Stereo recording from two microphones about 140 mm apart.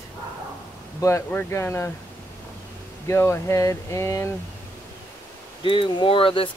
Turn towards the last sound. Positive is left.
turn(degrees=40)  # may be behind; listen again after turning